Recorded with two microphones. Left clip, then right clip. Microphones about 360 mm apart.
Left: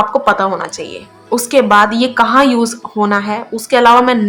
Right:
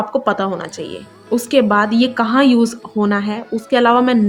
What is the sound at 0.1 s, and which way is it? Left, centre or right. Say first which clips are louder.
A woman's voice: left 5 dB; right.